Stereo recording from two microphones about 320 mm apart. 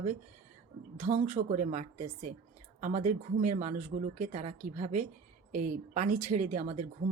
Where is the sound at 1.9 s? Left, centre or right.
Right.